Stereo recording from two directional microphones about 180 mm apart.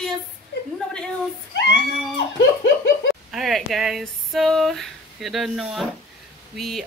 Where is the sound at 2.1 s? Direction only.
75° left (ahead or behind).